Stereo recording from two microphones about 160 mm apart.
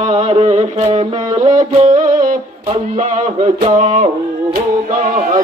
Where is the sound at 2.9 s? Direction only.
45° right (ahead or behind).